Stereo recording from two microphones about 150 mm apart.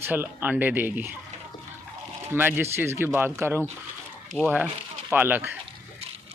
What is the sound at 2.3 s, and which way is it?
Speech, 15° right (ahead or behind).